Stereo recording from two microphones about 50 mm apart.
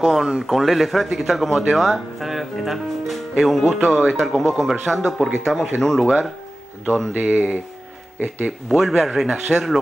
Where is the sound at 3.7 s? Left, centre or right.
Right.